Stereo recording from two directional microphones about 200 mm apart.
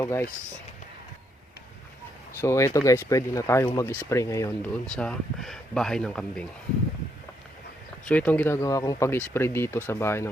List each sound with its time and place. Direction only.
0.0 s speech: 15° left (ahead or behind)
2.4 s speech: 15° left (ahead or behind)
4.7 s speech: 5° left (ahead or behind)
8.0 s speech: 5° left (ahead or behind)